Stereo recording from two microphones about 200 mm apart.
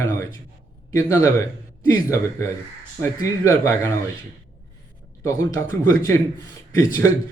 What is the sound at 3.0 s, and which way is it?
Speech, 15° left (ahead or behind).